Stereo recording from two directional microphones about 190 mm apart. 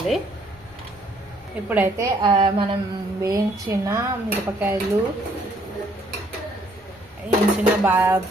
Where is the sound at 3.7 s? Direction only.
15° right (ahead or behind).